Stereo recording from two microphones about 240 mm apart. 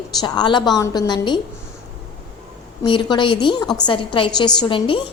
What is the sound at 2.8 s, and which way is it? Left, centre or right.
A woman's voice, centre.